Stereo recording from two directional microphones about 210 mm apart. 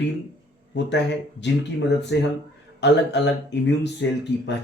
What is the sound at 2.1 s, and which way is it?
Speech, 55° left (ahead or behind).